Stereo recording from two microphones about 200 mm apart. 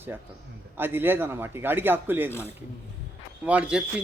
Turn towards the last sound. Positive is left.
turn(degrees=-5)  # may be behind; listen again after turning